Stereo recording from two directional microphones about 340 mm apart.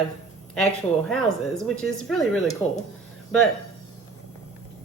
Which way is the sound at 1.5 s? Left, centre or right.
Centre.